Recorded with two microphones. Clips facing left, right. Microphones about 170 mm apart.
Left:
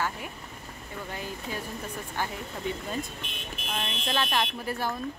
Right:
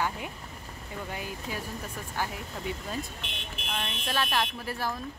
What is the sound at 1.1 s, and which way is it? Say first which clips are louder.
Speech: left 2 dB; 10° right (ahead or behind).